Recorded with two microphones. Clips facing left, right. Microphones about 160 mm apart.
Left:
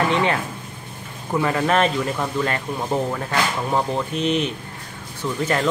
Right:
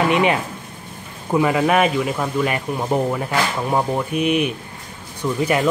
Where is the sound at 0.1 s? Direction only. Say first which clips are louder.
Right 3 dB; 15° right (ahead or behind).